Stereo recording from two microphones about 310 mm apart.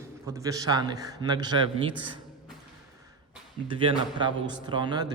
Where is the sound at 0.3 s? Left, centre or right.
Centre.